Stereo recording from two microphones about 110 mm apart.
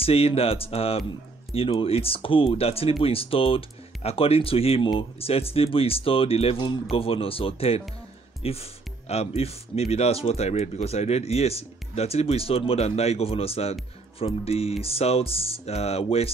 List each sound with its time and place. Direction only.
0.0 s speech: 60° left (ahead or behind)
6.6 s speech: 50° left (ahead or behind); by 16.3 s 65° left (ahead or behind)